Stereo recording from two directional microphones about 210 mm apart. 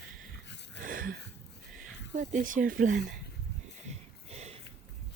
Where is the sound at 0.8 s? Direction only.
40° right (ahead or behind).